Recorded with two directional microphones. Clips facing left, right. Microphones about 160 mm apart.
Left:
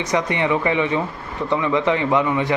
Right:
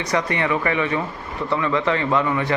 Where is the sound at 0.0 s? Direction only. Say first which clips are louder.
Left 2 dB; 20° left (ahead or behind).